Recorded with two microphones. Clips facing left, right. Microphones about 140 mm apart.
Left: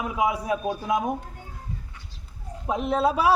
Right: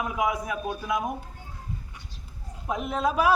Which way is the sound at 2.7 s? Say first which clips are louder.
Left 4 dB; 30° left (ahead or behind).